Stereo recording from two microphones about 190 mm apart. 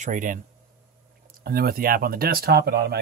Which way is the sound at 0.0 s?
45° right (ahead or behind).